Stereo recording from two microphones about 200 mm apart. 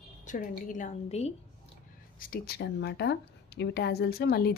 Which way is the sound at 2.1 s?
45° left (ahead or behind).